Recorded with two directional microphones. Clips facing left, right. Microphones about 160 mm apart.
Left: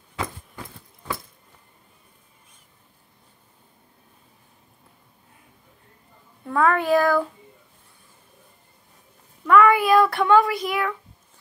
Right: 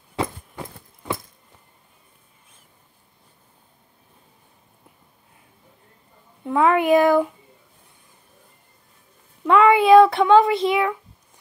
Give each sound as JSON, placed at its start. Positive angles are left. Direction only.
{"t": 6.4, "sound": "speech", "side_deg": -20}
{"t": 9.4, "sound": "speech", "side_deg": -25}